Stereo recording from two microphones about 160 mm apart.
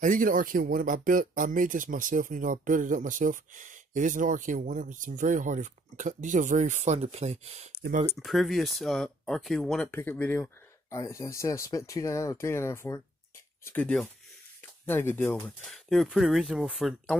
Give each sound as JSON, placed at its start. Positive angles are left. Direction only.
{"t": 0.0, "sound": "speech", "side_deg": -55}
{"t": 8.2, "sound": "speech", "side_deg": 0}